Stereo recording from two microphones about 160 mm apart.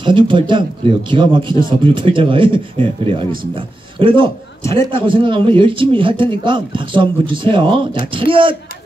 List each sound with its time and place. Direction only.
0.0 s a man's voice: 30° right (ahead or behind)